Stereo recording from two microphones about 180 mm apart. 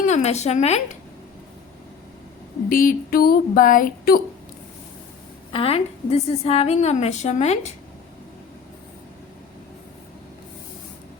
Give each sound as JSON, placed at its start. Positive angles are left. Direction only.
{"t": 0.1, "sound": "a woman's voice", "side_deg": 40}
{"t": 2.6, "sound": "a sound", "side_deg": 50}
{"t": 5.5, "sound": "a woman's voice", "side_deg": 30}